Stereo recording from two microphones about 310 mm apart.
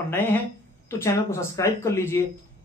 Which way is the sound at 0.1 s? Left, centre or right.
Centre.